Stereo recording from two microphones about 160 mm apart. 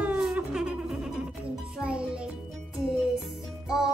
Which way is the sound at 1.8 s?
5° right (ahead or behind).